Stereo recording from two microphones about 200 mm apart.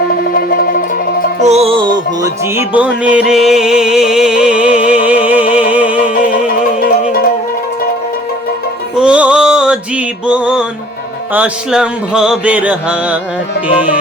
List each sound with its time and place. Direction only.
0.3 s music: 45° left (ahead or behind)
1.4 s music: 35° right (ahead or behind); by 6.1 s 5° right (ahead or behind)
9.0 s music: 5° right (ahead or behind)
11.3 s mantra: 5° right (ahead or behind)